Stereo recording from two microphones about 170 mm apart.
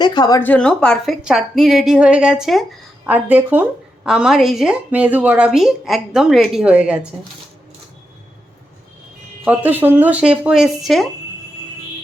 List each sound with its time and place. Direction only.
0.0 s a woman's voice: 25° left (ahead or behind)
0.3 s a woman's voice: 10° left (ahead or behind); by 7.1 s 5° right (ahead or behind)
9.4 s speech: 10° right (ahead or behind)